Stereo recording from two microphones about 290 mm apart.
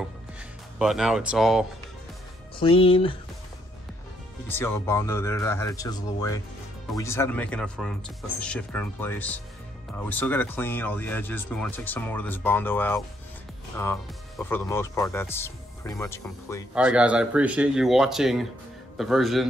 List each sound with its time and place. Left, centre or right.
0.0 s music: centre
2.6 s speech: centre
4.5 s speech: centre
14.4 s speech: centre
16.7 s speech: centre